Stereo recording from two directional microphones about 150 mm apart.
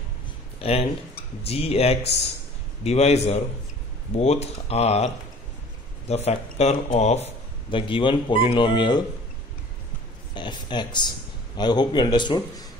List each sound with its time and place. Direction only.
0.6 s speech: 40° left (ahead or behind)
7.7 s speech: 35° left (ahead or behind)
10.3 s a man's voice: 30° left (ahead or behind)